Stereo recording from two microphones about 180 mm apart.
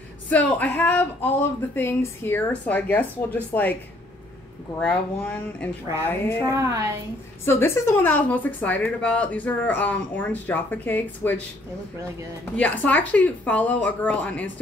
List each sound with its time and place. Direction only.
0.3 s speech: 10° left (ahead or behind)
4.7 s speech: 5° left (ahead or behind)
6.5 s a woman's voice: 15° right (ahead or behind)
7.4 s speech: 15° left (ahead or behind)
12.5 s speech: 10° left (ahead or behind)